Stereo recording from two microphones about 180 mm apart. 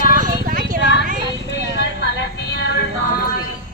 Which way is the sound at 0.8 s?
75° left (ahead or behind).